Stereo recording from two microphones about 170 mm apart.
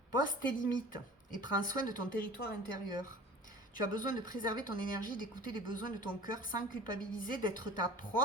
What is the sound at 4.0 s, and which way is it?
A woman's voice, 55° left (ahead or behind).